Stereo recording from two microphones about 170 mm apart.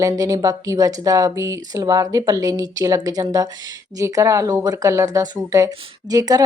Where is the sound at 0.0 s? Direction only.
20° right (ahead or behind).